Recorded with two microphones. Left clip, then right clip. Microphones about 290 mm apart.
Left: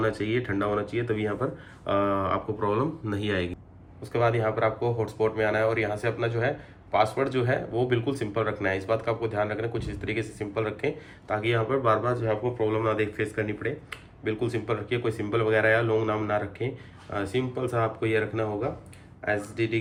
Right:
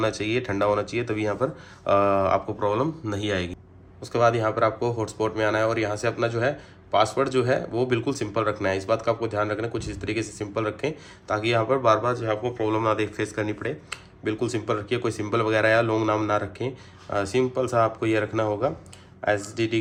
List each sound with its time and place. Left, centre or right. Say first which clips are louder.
0.0 s speech: right 2 dB; centre